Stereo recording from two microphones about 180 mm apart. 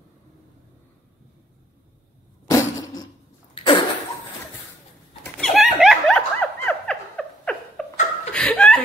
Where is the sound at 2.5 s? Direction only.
20° left (ahead or behind).